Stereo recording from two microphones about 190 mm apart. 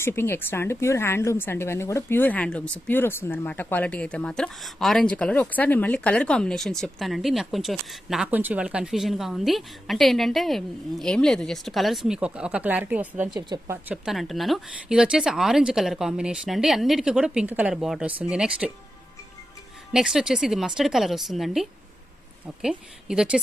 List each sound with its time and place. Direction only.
0.0 s a woman's voice: 10° left (ahead or behind); by 13.1 s 5° right (ahead or behind)
13.3 s speech: 20° right (ahead or behind)
13.8 s a woman's voice: 5° right (ahead or behind)
19.9 s a woman's voice: 5° right (ahead or behind)